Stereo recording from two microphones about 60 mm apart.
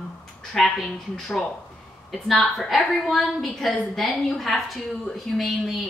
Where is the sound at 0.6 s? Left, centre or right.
Centre.